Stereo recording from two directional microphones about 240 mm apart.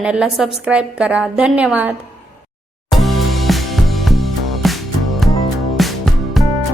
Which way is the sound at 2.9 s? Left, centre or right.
Centre.